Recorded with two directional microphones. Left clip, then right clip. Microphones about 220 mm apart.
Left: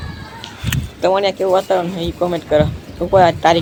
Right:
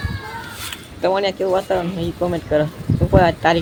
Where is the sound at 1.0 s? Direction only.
5° left (ahead or behind).